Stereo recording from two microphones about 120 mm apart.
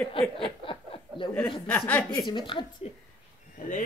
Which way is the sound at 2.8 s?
55° left (ahead or behind).